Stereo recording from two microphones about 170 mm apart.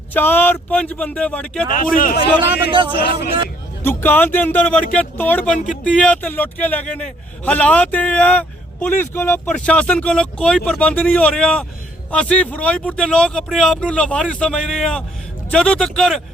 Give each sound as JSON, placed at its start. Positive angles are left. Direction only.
{"t": 0.1, "sound": "a man's voice", "side_deg": 10}
{"t": 1.7, "sound": "a man's voice", "side_deg": 55}
{"t": 2.4, "sound": "a man's voice", "side_deg": -30}
{"t": 3.1, "sound": "speech", "side_deg": 70}
{"t": 3.8, "sound": "a man's voice", "side_deg": 10}